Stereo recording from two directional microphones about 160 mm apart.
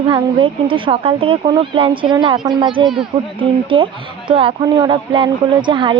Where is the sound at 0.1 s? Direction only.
30° right (ahead or behind).